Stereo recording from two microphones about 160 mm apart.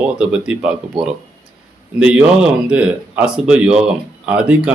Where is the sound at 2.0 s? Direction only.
5° right (ahead or behind).